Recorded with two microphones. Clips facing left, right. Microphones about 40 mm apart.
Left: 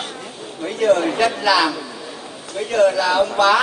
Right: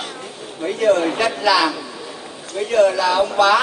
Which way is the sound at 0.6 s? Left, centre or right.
Centre.